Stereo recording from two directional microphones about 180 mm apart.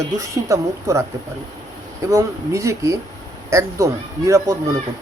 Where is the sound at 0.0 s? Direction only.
15° right (ahead or behind).